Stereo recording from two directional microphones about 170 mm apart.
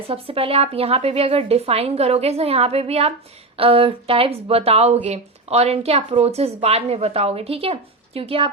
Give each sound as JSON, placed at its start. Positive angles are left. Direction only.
{"t": 0.1, "sound": "speech", "side_deg": -35}